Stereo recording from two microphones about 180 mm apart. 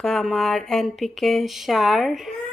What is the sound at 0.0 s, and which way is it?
A woman's voice, centre (ahead or behind).